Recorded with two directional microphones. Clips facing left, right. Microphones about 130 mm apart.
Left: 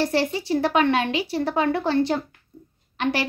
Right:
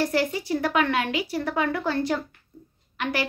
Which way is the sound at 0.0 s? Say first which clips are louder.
Left 2 dB; 30° left (ahead or behind).